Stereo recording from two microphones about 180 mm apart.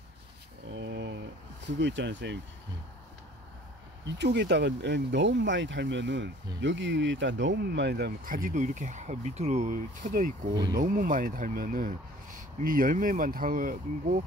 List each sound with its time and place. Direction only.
0.7 s a sound: 75° right (ahead or behind)
1.8 s speech: 85° right
4.0 s speech: 70° right (ahead or behind)
6.6 s speech: 90° right; by 10.3 s 45° right (ahead or behind)
10.5 s speech: 25° right (ahead or behind)
10.8 s speech: 50° right (ahead or behind)